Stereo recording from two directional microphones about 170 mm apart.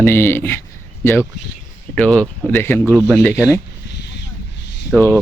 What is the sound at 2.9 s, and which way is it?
Speech, centre (ahead or behind).